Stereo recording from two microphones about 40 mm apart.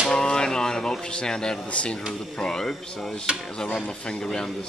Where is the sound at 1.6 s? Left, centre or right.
Left.